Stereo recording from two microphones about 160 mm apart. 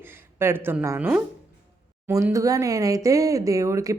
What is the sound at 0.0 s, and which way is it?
Speech, 15° right (ahead or behind).